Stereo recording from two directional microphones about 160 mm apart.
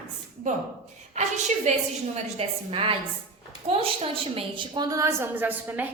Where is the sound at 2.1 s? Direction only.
40° right (ahead or behind).